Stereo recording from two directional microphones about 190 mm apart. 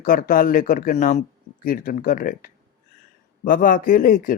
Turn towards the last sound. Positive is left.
turn(degrees=45)  # may be behind; listen again after turning